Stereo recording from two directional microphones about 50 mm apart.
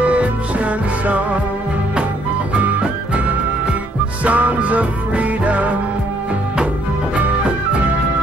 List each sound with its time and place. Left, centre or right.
0.0 s music: right
2.5 s music: right